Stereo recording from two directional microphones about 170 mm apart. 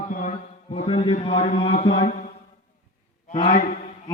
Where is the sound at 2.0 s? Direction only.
45° left (ahead or behind).